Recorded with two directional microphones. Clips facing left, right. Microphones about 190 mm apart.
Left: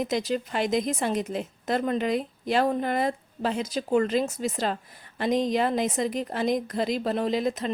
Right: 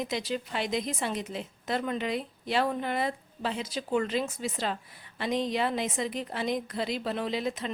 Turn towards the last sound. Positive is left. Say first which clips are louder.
# left 5 dB
turn(degrees=45)  # may be behind; listen again after turning